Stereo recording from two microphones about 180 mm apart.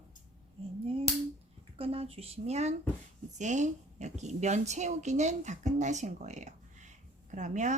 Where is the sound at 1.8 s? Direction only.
35° right (ahead or behind).